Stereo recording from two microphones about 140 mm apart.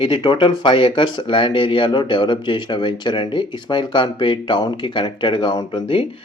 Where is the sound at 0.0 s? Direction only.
35° left (ahead or behind).